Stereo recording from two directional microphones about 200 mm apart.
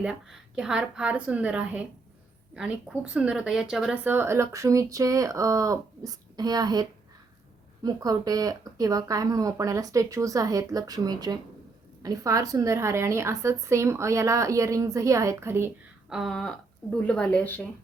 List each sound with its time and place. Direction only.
0.0 s a woman's voice: 5° right (ahead or behind); by 6.8 s 20° right (ahead or behind)
7.9 s a woman's voice: 20° right (ahead or behind); by 17.7 s 10° left (ahead or behind)